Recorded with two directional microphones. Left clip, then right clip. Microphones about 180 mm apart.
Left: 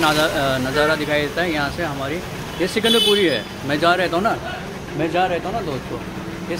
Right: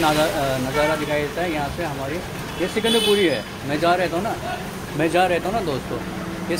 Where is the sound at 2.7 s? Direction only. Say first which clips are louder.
Left 3 dB; 20° left (ahead or behind).